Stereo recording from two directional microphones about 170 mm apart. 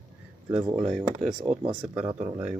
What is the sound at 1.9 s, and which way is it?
Speech, 15° right (ahead or behind).